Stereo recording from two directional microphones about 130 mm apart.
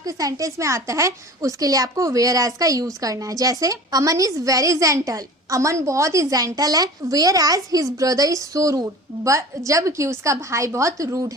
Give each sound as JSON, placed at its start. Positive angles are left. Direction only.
{"t": 0.0, "sound": "a woman's voice", "side_deg": -25}